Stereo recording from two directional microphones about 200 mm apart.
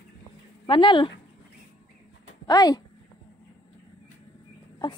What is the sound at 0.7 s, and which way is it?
Speech, 25° left (ahead or behind).